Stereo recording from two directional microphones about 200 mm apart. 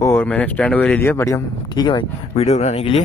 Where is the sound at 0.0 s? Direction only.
10° left (ahead or behind).